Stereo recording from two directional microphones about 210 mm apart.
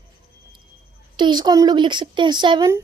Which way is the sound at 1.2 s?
20° right (ahead or behind).